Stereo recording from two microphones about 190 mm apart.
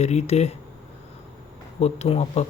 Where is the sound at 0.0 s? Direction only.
35° left (ahead or behind).